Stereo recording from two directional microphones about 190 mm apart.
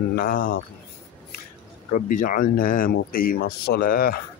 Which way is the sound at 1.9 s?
45° left (ahead or behind).